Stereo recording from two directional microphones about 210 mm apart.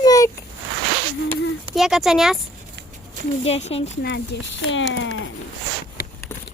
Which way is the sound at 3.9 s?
55° left (ahead or behind).